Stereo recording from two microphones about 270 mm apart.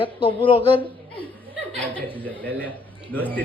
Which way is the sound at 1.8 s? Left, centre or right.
Centre.